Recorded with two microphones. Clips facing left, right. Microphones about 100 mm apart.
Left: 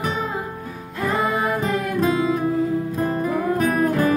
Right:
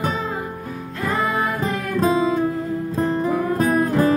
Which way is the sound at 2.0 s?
30° right (ahead or behind).